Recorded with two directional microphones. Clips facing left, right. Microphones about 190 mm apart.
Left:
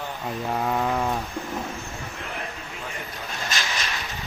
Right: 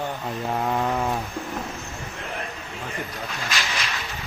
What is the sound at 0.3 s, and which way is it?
Mantra, centre (ahead or behind).